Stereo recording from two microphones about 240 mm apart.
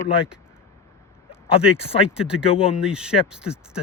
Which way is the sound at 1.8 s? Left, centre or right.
Left.